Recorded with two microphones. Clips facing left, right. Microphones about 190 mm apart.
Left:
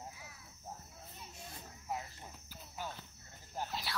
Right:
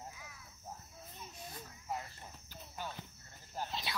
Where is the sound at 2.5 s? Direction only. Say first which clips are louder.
Even; 5° left (ahead or behind).